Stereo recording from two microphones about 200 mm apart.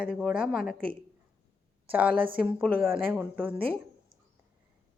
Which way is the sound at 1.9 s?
5° right (ahead or behind).